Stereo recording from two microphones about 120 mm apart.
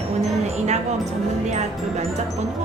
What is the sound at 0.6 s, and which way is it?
A woman's voice, 70° right (ahead or behind).